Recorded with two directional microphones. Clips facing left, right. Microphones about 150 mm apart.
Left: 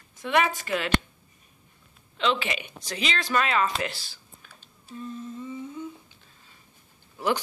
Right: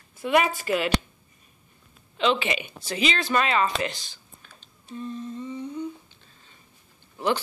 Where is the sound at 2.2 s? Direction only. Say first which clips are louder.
Right 3 dB; centre (ahead or behind).